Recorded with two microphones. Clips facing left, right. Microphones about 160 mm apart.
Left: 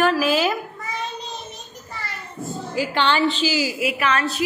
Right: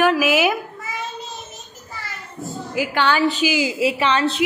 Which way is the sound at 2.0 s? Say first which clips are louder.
Left 1 dB; centre (ahead or behind).